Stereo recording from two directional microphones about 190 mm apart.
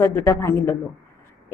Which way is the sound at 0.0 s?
15° left (ahead or behind).